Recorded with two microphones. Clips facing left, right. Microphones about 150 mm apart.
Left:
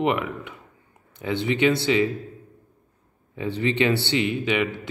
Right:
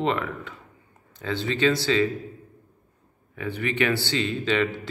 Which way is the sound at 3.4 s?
25° left (ahead or behind).